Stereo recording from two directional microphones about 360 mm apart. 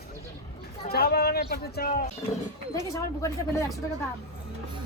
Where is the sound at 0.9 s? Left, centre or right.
Left.